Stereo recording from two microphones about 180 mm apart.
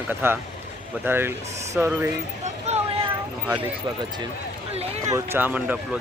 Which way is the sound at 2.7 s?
35° right (ahead or behind).